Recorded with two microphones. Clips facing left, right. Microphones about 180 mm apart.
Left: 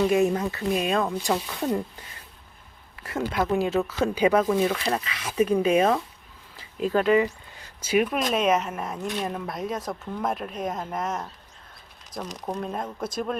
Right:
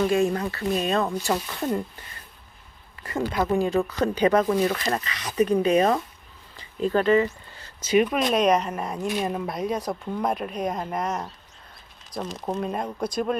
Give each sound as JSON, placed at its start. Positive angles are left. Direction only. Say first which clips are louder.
{"t": 0.1, "sound": "speech", "louder": "left 1 dB", "side_deg": 20}
{"t": 0.7, "sound": "speech", "louder": "right 1 dB", "side_deg": 10}
{"t": 3.0, "sound": "speech", "louder": "right 1 dB", "side_deg": 5}